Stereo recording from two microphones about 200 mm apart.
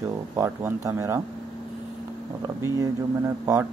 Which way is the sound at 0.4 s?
15° right (ahead or behind).